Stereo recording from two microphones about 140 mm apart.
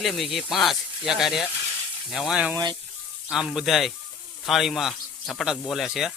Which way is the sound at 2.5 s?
30° right (ahead or behind).